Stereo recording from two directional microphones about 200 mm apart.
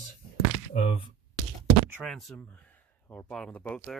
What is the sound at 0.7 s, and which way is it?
Speech, 45° left (ahead or behind).